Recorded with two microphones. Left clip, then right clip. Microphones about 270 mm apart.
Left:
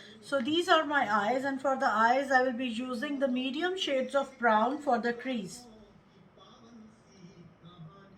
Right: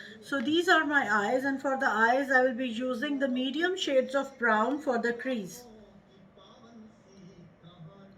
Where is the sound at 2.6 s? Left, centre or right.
Left.